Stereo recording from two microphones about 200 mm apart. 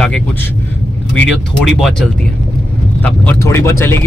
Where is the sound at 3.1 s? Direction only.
10° left (ahead or behind).